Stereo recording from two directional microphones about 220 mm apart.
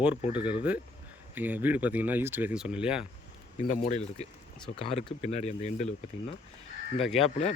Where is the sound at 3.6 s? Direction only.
30° left (ahead or behind).